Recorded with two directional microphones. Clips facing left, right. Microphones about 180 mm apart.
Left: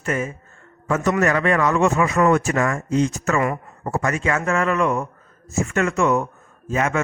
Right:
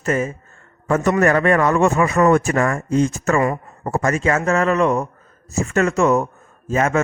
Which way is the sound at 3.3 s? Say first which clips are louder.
Right 3 dB; 35° right (ahead or behind).